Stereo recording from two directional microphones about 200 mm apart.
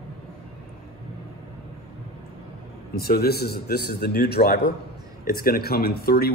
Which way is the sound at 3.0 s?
50° left (ahead or behind).